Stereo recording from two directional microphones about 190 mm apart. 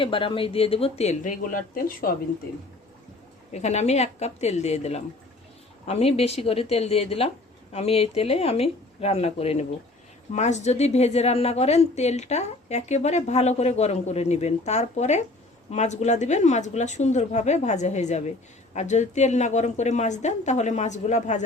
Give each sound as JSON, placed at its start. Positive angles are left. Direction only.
{"t": 0.0, "sound": "a woman's voice", "side_deg": 25}
{"t": 3.5, "sound": "a woman's voice", "side_deg": 35}